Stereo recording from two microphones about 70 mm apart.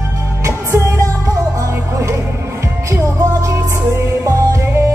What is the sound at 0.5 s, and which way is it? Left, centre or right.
Music, right.